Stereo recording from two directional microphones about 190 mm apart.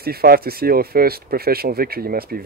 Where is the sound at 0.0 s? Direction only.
55° right (ahead or behind).